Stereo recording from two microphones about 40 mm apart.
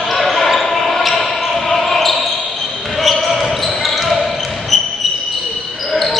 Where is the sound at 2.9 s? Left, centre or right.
Centre.